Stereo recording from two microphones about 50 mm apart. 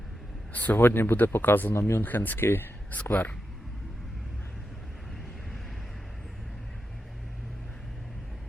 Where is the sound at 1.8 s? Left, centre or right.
Left.